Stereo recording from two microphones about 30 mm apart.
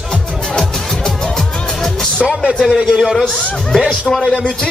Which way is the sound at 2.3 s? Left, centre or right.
Centre.